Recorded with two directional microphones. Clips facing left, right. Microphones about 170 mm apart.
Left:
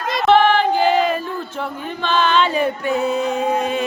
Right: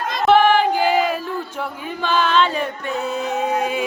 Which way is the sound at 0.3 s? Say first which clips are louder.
Even; 10° right (ahead or behind).